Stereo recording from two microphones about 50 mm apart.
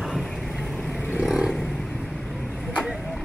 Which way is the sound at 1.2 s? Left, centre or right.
Centre.